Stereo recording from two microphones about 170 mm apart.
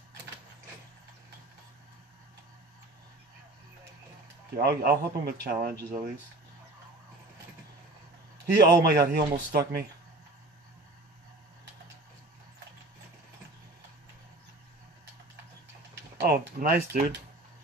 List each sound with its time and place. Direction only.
4.6 s speech: 70° right (ahead or behind)
8.5 s speech: 70° right (ahead or behind)
16.2 s speech: 60° right (ahead or behind)